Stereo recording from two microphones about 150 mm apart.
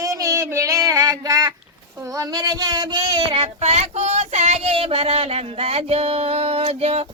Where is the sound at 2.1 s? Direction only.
25° right (ahead or behind); by 7.0 s 45° right (ahead or behind).